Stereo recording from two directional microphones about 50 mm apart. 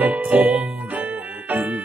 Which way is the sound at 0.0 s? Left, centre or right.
Right.